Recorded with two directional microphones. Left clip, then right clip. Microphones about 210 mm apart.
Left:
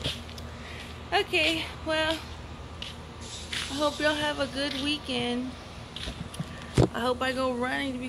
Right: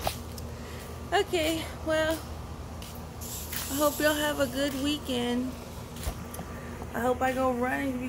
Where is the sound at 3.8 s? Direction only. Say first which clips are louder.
Right 1 dB; centre (ahead or behind).